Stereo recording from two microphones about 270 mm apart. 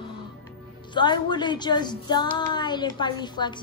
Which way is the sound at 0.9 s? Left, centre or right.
Centre.